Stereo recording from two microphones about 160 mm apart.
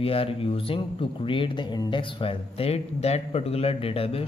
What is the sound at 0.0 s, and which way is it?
Speech, 35° left (ahead or behind).